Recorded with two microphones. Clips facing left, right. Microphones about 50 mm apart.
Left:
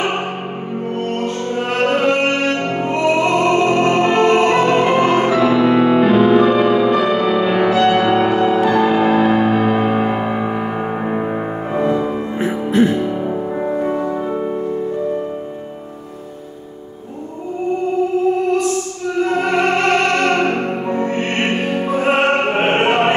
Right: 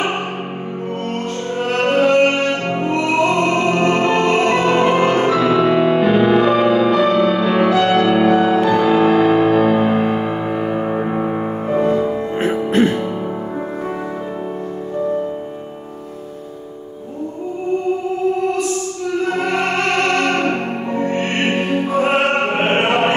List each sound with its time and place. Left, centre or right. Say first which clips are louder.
1.7 s music: right 2 dB; centre
12.4 s music: even; right
19.3 s music: left 3 dB; centre